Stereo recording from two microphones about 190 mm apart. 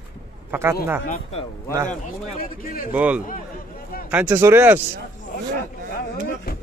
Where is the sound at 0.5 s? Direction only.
15° right (ahead or behind).